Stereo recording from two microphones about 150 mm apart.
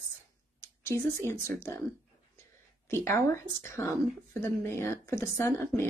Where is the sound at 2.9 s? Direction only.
15° left (ahead or behind).